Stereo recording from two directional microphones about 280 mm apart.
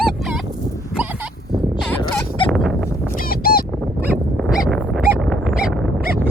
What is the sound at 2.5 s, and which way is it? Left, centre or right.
Dog, centre.